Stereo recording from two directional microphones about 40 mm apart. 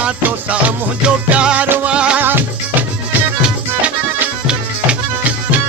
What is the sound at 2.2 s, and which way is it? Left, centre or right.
Music, right.